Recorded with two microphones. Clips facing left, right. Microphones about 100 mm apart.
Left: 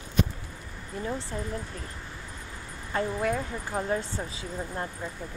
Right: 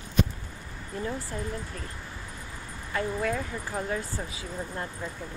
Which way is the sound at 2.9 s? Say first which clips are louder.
Left 1 dB; 25° left (ahead or behind).